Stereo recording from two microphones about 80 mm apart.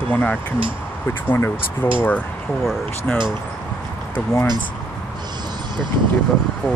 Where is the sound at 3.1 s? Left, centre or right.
Centre.